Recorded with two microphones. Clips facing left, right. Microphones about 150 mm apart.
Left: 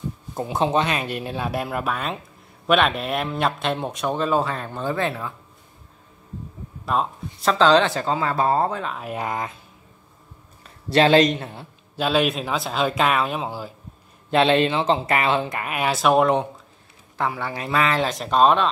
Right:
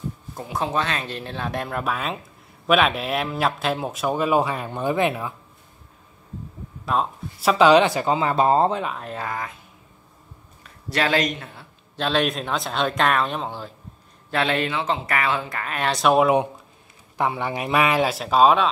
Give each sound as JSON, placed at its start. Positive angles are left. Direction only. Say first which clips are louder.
{"t": 0.3, "sound": "speech", "louder": "left 5 dB", "side_deg": 25}
{"t": 6.9, "sound": "speech", "louder": "even", "side_deg": -5}
{"t": 9.0, "sound": "speech", "louder": "left 3 dB", "side_deg": 15}
{"t": 10.6, "sound": "a man's voice", "louder": "left 7 dB", "side_deg": 25}
{"t": 12.0, "sound": "speech", "louder": "left 2 dB", "side_deg": 5}
{"t": 14.3, "sound": "speech", "louder": "left 5 dB", "side_deg": 25}
{"t": 15.6, "sound": "speech", "louder": "right 3 dB", "side_deg": 10}
{"t": 17.2, "sound": "speech", "louder": "right 2 dB", "side_deg": -20}